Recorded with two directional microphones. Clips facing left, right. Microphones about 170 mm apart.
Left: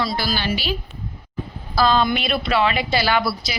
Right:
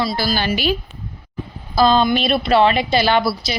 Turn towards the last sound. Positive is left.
turn(degrees=-25)  # may be behind; listen again after turning